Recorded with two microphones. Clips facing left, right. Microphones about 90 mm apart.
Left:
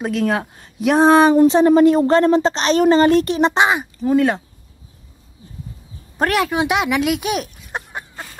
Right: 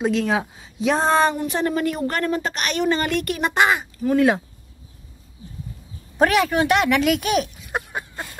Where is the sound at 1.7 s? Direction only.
30° left (ahead or behind).